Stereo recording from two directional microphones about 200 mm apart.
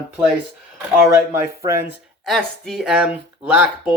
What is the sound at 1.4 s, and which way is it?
Speech, 15° right (ahead or behind).